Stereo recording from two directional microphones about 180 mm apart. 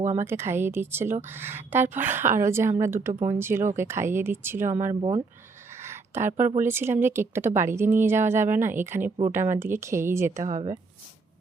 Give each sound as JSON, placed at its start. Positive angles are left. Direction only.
{"t": 0.2, "sound": "speech", "side_deg": -15}
{"t": 4.9, "sound": "speech", "side_deg": -30}
{"t": 5.7, "sound": "a sound", "side_deg": -15}
{"t": 6.6, "sound": "speech", "side_deg": -10}
{"t": 10.4, "sound": "speech", "side_deg": -40}